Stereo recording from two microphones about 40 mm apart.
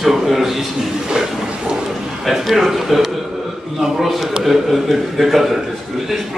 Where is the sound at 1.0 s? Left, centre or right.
Centre.